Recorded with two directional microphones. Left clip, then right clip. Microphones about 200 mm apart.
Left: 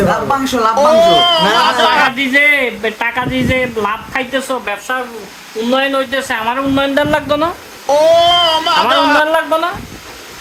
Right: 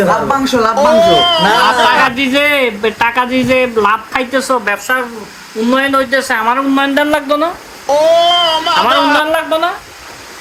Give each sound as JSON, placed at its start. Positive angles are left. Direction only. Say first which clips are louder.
{"t": 0.3, "sound": "speech", "louder": "right 1 dB", "side_deg": 10}
{"t": 4.3, "sound": "speech", "louder": "right 8 dB", "side_deg": -15}
{"t": 7.9, "sound": "speech", "louder": "even", "side_deg": 0}